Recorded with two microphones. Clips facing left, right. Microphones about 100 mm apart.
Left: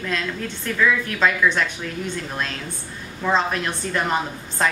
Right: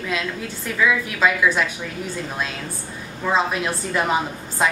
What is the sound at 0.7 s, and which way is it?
A woman's voice, 5° right (ahead or behind).